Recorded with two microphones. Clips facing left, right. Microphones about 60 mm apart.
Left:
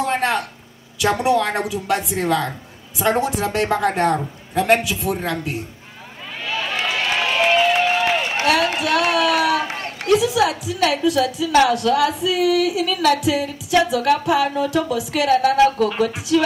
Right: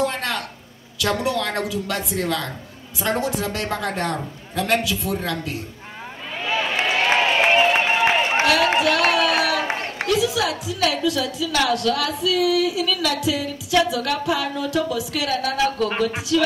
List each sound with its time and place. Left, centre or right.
0.0 s a sound: left
0.9 s a woman's voice: left
6.4 s a sound: right
9.2 s speech: right
9.6 s run: right
10.0 s a woman's voice: left